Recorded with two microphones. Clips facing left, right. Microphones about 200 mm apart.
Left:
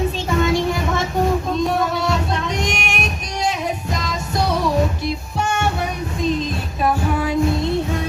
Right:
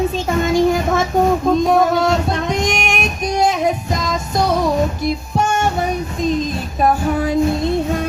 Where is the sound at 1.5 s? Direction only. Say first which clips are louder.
Right 6 dB; 45° right (ahead or behind).